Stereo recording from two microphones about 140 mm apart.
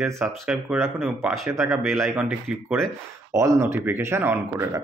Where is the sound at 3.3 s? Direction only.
20° right (ahead or behind).